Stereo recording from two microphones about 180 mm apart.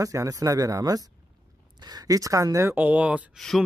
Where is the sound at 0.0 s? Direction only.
20° right (ahead or behind).